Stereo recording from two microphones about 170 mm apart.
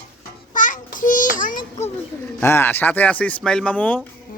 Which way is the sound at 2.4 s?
15° left (ahead or behind).